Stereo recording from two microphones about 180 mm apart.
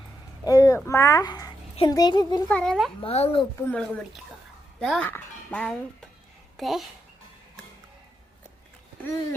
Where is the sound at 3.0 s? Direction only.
35° left (ahead or behind).